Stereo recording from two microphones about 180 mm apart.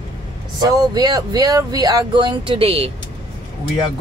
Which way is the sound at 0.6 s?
20° right (ahead or behind).